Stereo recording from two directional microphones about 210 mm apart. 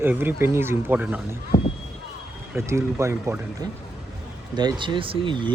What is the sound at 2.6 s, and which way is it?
Speech, 15° right (ahead or behind).